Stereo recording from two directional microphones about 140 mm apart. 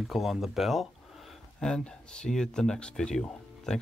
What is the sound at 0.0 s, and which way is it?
Speech, centre (ahead or behind).